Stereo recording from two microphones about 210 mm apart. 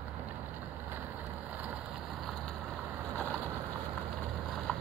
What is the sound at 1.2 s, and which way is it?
Vehicle, 5° right (ahead or behind).